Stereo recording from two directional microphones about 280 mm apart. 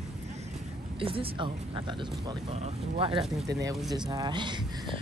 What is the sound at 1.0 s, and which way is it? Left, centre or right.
Speech, centre.